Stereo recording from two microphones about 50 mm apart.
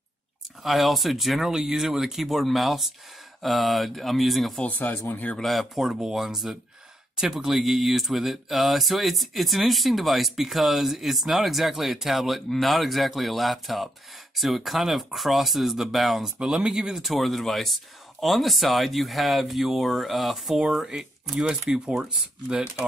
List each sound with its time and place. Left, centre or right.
0.7 s speech: centre
1.4 s speech: centre
4.6 s speech: left
5.4 s speech: centre
16.3 s speech: centre
17.0 s speech: centre